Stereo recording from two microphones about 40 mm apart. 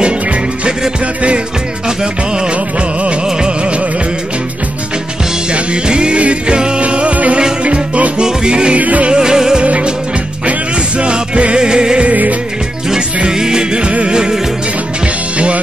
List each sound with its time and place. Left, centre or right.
3.3 s music: right
5.5 s music: right
8.7 s music: right
9.1 s music: centre
9.7 s music: right
11.0 s music: right
12.1 s music: right
13.3 s music: centre; by 15.6 s right